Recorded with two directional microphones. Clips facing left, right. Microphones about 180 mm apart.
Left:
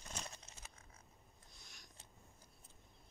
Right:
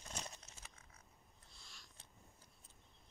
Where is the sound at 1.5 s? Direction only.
20° left (ahead or behind).